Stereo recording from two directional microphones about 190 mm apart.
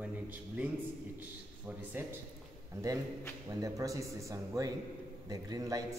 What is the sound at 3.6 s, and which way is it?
A man's voice, 15° right (ahead or behind).